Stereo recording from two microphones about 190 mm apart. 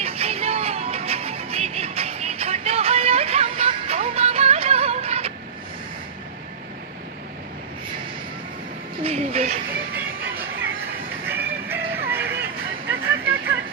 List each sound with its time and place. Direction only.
0.0 s music: 30° right (ahead or behind)
9.0 s a sound: 35° right (ahead or behind)
9.9 s music: 10° right (ahead or behind)